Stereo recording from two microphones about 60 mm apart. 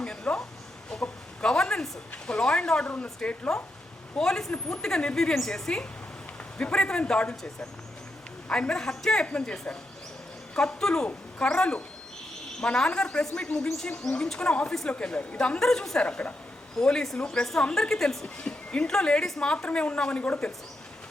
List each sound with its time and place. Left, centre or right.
0.0 s a sound: centre
1.0 s a man's voice: centre
15.5 s a man's voice: centre
16.0 s a woman's voice: left